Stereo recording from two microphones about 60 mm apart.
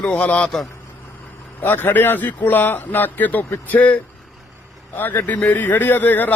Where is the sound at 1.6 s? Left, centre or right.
Left.